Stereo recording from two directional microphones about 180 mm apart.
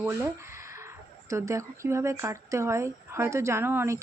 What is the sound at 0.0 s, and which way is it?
Speech, 15° right (ahead or behind).